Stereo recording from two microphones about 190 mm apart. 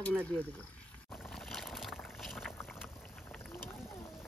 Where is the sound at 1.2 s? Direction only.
Centre (ahead or behind).